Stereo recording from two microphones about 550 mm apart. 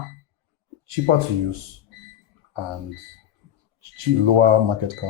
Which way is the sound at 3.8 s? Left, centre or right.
Right.